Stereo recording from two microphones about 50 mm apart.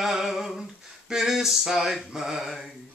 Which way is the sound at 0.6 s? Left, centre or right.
Centre.